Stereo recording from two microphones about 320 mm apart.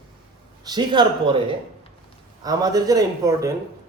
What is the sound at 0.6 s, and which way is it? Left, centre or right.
Speech, centre.